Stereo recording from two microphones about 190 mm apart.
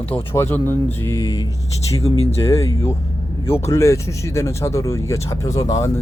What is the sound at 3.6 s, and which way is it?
Speech, 15° left (ahead or behind).